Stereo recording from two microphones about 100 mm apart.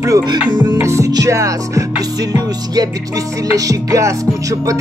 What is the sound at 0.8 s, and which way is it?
Music, 30° right (ahead or behind).